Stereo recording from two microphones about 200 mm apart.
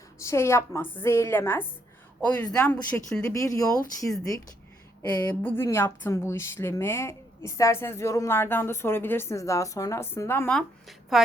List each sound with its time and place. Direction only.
0.2 s speech: 15° left (ahead or behind)
5.5 s speech: 10° left (ahead or behind)